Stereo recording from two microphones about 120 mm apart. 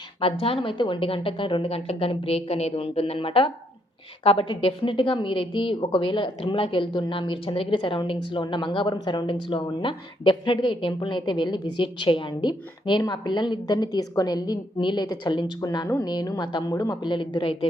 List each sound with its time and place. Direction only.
0.2 s a woman's voice: 50° left (ahead or behind)
16.7 s speech: 25° left (ahead or behind)
17.0 s a woman's voice: 40° left (ahead or behind)